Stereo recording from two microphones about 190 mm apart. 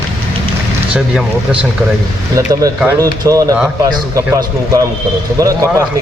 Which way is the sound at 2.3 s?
20° right (ahead or behind).